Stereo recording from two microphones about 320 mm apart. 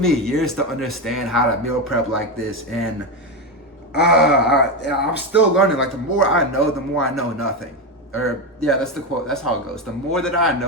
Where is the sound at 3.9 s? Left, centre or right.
Left.